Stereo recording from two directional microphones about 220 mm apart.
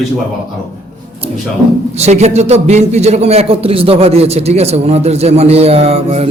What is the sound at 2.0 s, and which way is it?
A man's voice, 30° right (ahead or behind).